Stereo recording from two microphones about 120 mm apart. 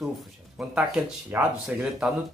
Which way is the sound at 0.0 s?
5° right (ahead or behind).